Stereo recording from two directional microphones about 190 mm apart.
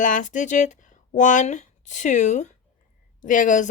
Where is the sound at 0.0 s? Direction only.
40° left (ahead or behind).